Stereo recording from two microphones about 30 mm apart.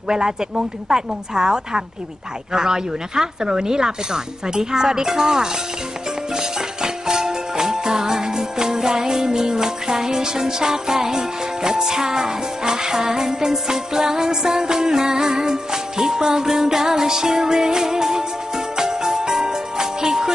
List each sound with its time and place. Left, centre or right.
0.1 s speech: right
6.3 s music: right